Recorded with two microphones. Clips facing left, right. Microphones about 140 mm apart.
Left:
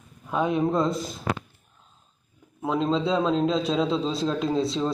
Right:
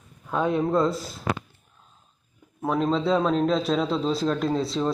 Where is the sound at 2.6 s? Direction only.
Centre (ahead or behind).